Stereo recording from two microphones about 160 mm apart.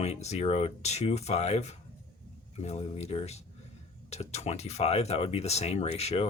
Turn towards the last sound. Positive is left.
turn(degrees=40)  # may be behind; listen again after turning